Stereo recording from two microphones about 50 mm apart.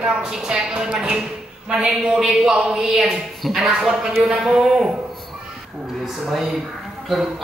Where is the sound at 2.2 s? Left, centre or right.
Centre.